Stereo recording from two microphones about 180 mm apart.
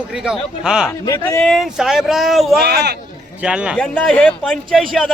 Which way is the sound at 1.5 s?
Centre (ahead or behind).